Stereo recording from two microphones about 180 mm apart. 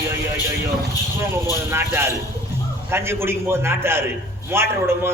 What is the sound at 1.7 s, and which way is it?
A man's voice, 15° right (ahead or behind).